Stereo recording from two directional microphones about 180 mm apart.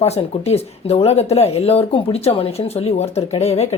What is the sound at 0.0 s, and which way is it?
Speech, 35° left (ahead or behind).